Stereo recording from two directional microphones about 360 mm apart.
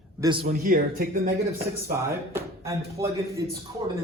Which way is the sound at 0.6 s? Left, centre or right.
Right.